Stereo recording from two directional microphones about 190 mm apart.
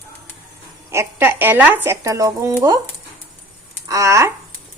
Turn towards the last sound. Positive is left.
turn(degrees=-15)  # may be behind; listen again after turning